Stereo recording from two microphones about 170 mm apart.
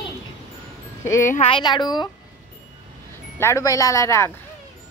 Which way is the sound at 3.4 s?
15° left (ahead or behind).